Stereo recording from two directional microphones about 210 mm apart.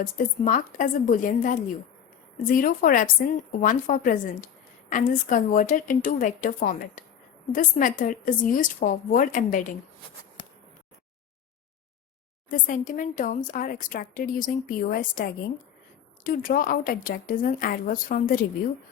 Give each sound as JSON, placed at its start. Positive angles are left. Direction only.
{"t": 0.0, "sound": "speech", "side_deg": 40}
{"t": 12.5, "sound": "speech", "side_deg": 40}